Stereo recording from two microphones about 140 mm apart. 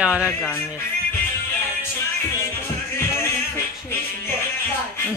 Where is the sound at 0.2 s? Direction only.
15° left (ahead or behind).